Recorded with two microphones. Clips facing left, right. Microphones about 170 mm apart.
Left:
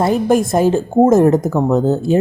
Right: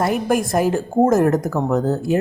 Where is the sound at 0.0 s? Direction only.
25° left (ahead or behind).